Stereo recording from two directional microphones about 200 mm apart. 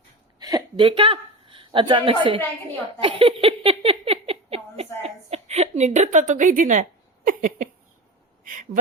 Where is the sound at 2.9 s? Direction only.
25° right (ahead or behind).